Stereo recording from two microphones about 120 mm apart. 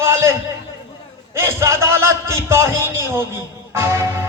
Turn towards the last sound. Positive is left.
turn(degrees=-20)  # may be behind; listen again after turning